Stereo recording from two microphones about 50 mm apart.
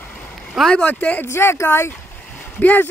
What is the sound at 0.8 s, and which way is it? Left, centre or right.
Speech, left.